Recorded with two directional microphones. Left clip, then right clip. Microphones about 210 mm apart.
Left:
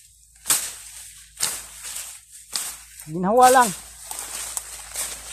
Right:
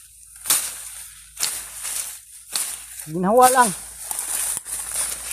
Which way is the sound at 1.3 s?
40° right (ahead or behind).